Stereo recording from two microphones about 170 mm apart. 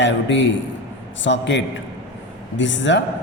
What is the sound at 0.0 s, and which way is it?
A man's voice, 90° left.